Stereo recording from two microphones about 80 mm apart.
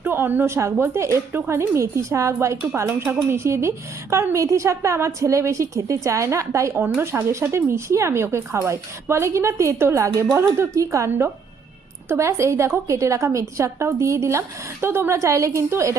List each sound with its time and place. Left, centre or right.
0.0 s a woman's voice: right